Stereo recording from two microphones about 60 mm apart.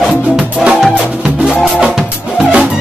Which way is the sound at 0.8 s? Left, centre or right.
Centre.